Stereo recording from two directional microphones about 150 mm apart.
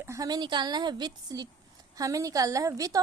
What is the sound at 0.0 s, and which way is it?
A woman's voice, 20° right (ahead or behind).